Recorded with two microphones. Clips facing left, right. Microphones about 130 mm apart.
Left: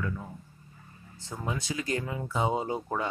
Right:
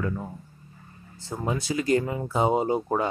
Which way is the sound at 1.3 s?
45° right (ahead or behind).